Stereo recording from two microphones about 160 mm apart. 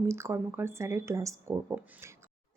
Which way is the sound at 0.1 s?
15° right (ahead or behind).